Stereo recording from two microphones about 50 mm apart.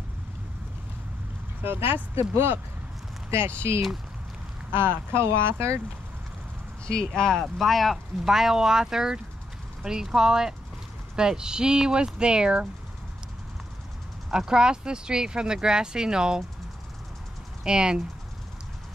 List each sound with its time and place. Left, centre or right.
1.6 s speech: right
2.1 s speech: right
6.9 s speech: centre
7.5 s speech: centre
14.3 s speech: centre
17.6 s speech: centre